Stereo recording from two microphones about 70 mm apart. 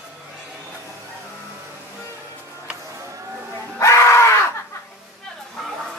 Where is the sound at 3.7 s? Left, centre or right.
Left.